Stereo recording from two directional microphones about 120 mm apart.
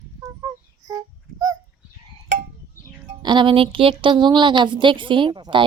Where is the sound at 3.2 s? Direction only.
40° right (ahead or behind).